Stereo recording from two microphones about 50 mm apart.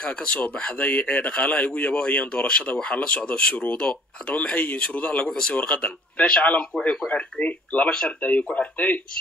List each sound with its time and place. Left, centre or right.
0.0 s speech: left
7.1 s speech: left